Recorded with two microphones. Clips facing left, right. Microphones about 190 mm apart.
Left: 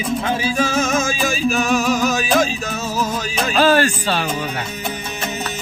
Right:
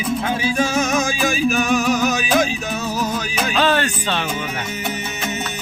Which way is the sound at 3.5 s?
40° left (ahead or behind).